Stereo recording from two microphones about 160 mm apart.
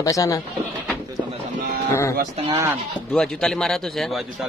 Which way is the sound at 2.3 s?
35° right (ahead or behind).